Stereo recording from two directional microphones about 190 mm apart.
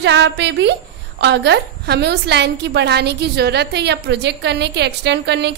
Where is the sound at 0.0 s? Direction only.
65° right (ahead or behind).